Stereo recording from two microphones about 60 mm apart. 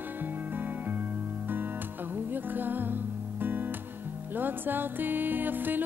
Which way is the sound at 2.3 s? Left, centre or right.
Right.